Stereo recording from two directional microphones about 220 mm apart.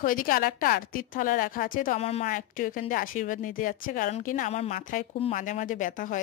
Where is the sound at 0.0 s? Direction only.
40° left (ahead or behind).